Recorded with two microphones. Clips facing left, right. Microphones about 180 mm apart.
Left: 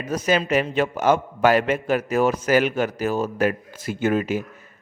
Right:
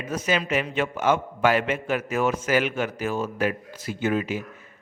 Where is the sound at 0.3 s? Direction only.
40° left (ahead or behind).